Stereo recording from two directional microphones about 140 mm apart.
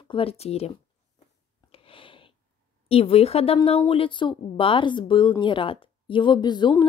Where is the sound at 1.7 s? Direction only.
40° left (ahead or behind).